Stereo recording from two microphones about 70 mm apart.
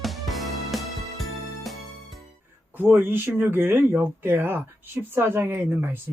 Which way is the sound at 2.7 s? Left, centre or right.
Right.